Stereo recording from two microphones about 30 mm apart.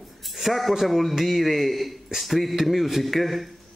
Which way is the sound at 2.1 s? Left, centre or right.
Centre.